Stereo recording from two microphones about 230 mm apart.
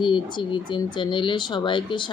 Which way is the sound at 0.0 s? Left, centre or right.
Centre.